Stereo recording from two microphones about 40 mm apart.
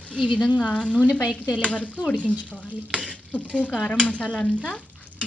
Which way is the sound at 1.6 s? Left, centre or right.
Left.